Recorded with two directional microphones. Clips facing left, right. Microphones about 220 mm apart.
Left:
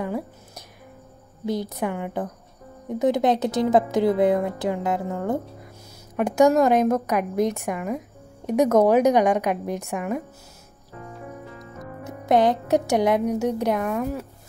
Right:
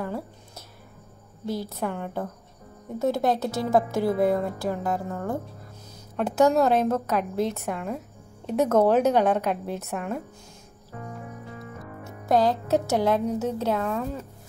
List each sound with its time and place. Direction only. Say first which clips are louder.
0.0 s a woman's voice: left 4 dB; 15° left (ahead or behind)
12.0 s a woman's voice: left 3 dB; 20° left (ahead or behind)